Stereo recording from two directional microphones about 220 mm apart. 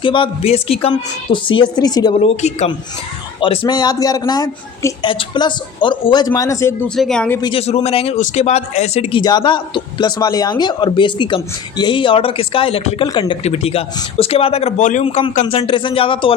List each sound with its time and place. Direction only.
0.0 s a man's voice: 20° left (ahead or behind)
6.9 s speech: 5° left (ahead or behind)
7.4 s a man's voice: 25° left (ahead or behind)